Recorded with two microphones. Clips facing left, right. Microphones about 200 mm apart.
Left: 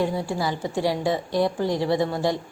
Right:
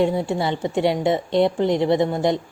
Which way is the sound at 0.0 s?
25° right (ahead or behind).